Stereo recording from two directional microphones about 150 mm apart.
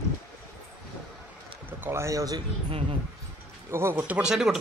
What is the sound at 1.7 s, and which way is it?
Speech, 15° right (ahead or behind).